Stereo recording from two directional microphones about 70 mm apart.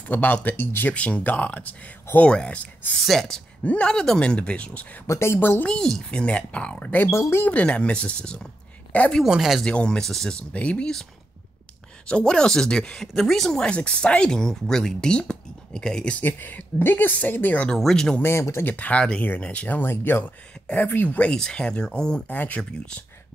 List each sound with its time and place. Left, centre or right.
0.1 s speech: left
3.1 s speech: centre
5.0 s speech: left
5.7 s speech: centre
7.0 s speech: left
7.4 s speech: centre
9.2 s speech: centre
9.6 s speech: centre
10.5 s speech: centre
12.1 s speech: centre
16.2 s speech: left
17.6 s speech: centre
18.2 s speech: left
18.6 s speech: left